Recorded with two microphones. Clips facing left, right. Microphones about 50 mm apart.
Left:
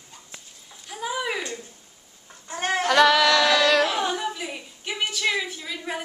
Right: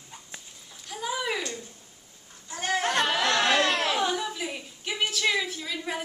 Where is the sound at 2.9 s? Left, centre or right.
Left.